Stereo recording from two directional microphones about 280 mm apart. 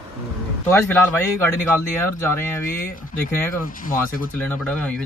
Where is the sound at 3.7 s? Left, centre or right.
Left.